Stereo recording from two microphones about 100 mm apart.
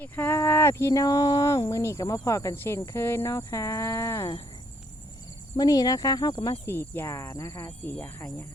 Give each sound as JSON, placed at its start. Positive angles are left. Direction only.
{"t": 0.0, "sound": "speech", "side_deg": 20}
{"t": 5.5, "sound": "speech", "side_deg": 40}
{"t": 6.7, "sound": "speech", "side_deg": 25}